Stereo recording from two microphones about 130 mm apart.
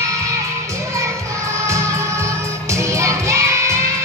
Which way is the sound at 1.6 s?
20° right (ahead or behind).